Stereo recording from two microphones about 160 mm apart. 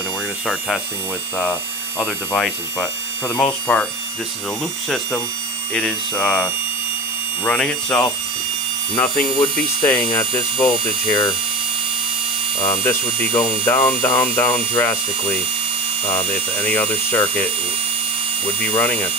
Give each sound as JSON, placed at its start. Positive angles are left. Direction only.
{"t": 1.4, "sound": "mains hum", "side_deg": 5}
{"t": 4.8, "sound": "mains hum", "side_deg": 0}
{"t": 5.8, "sound": "speech", "side_deg": 5}
{"t": 7.4, "sound": "speech", "side_deg": 10}
{"t": 9.8, "sound": "speech", "side_deg": 20}
{"t": 12.6, "sound": "speech", "side_deg": 20}
{"t": 16.2, "sound": "speech", "side_deg": 10}